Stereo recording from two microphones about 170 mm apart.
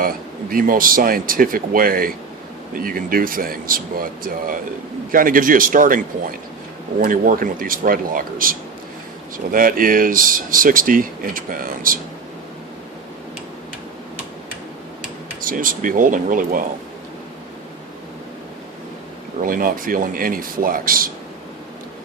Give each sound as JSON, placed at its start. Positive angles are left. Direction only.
{"t": 0.5, "sound": "speech", "side_deg": -55}
{"t": 7.0, "sound": "speech", "side_deg": -55}
{"t": 15.4, "sound": "speech", "side_deg": -55}
{"t": 19.4, "sound": "speech", "side_deg": -55}